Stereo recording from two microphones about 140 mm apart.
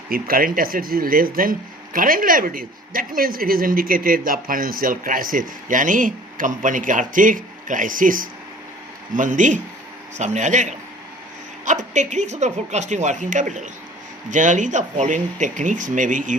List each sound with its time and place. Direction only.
0.1 s speech: 90° right
9.1 s speech: 65° right (ahead or behind)